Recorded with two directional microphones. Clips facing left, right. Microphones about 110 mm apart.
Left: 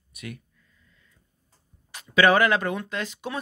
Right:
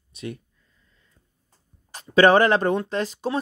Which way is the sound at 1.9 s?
35° right (ahead or behind).